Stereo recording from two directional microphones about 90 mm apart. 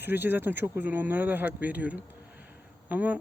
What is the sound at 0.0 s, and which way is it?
Speech, 20° right (ahead or behind).